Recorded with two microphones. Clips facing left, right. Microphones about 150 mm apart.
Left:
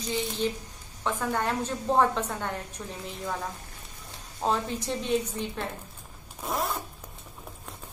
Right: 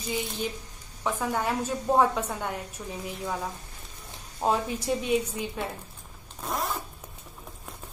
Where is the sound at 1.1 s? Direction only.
10° right (ahead or behind).